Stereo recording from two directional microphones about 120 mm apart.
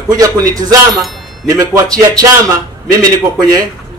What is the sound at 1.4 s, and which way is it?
Speech, 30° right (ahead or behind).